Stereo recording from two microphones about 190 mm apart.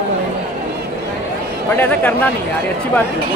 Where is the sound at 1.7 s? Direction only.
10° left (ahead or behind).